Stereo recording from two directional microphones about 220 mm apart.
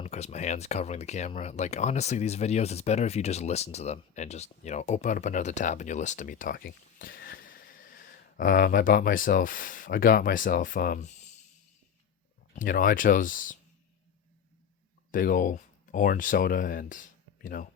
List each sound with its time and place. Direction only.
0.0 s speech: 30° left (ahead or behind)
12.5 s speech: 40° left (ahead or behind)
15.1 s speech: 40° left (ahead or behind)